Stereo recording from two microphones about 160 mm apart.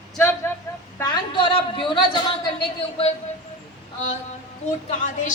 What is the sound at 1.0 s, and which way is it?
A woman's voice, 25° left (ahead or behind).